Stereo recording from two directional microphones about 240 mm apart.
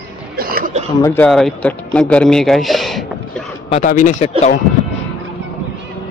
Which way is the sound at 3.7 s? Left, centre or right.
Left.